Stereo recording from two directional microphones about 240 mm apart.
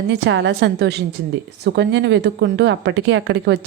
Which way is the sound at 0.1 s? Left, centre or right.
Right.